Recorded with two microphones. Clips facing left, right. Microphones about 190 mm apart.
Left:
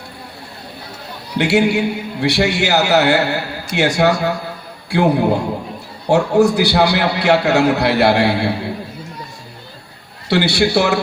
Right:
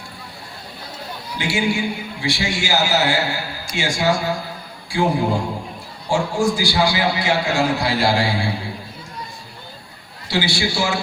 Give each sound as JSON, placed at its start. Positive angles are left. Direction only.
{"t": 1.4, "sound": "a man's voice", "side_deg": 65}
{"t": 10.2, "sound": "a man's voice", "side_deg": 65}